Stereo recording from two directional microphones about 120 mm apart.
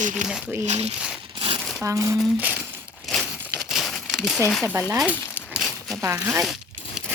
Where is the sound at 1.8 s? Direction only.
25° right (ahead or behind).